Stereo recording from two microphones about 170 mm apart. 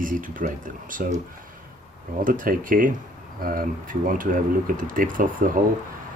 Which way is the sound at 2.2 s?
55° right (ahead or behind).